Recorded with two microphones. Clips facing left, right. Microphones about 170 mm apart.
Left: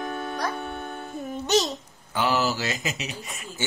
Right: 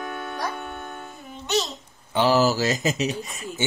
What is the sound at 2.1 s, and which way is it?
Speech, 35° right (ahead or behind).